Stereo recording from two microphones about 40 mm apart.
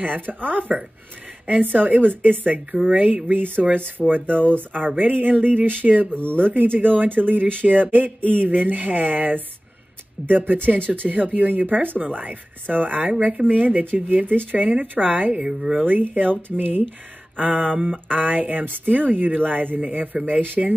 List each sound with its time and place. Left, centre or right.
0.0 s a woman's voice: right
3.3 s a woman's voice: right
15.4 s speech: centre
15.8 s a woman's voice: right
17.4 s speech: right
18.0 s a woman's voice: right